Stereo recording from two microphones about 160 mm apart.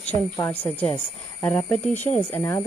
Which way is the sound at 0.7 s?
10° left (ahead or behind).